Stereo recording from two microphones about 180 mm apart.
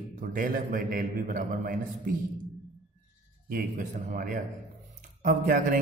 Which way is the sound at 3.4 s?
50° right (ahead or behind).